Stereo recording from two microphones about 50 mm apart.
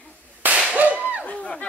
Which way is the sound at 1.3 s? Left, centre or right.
Left.